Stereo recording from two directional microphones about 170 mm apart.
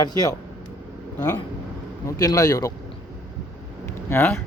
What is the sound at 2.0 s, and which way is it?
Speech, 20° left (ahead or behind).